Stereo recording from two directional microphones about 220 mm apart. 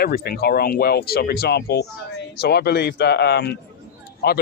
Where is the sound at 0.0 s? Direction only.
45° left (ahead or behind).